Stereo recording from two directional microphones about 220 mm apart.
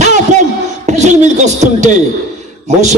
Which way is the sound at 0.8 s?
30° right (ahead or behind).